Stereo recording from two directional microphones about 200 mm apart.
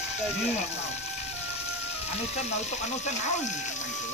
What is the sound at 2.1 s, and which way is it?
Speech, 35° left (ahead or behind).